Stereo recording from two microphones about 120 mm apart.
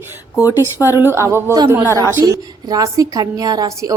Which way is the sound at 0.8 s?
25° left (ahead or behind).